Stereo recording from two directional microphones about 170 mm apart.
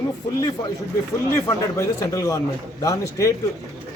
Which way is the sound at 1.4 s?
15° left (ahead or behind).